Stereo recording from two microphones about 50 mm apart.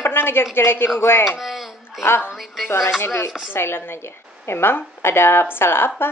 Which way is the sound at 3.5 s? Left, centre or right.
Left.